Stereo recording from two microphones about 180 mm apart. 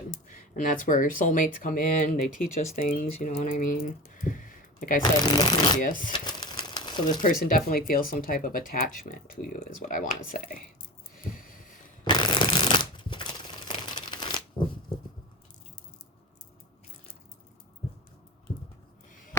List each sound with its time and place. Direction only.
0.1 s speech: 45° left (ahead or behind)
5.3 s speech: 25° left (ahead or behind)
5.8 s speech: 45° left (ahead or behind)
6.1 s a sound: 25° left (ahead or behind)
7.4 s speech: 50° left (ahead or behind)
11.2 s a sound: 50° left (ahead or behind)
12.0 s shuffling cards: 25° left (ahead or behind)
13.7 s crumpling: 25° left (ahead or behind)